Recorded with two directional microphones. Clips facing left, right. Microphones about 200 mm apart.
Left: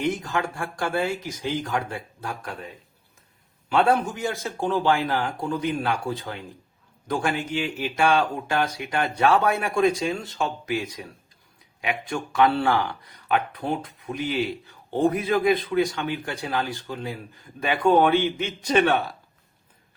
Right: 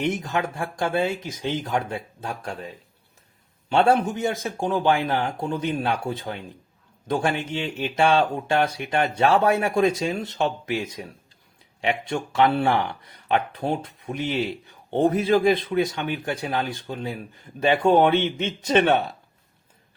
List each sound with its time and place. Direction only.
0.0 s speech: 20° right (ahead or behind)
3.7 s speech: 25° right (ahead or behind)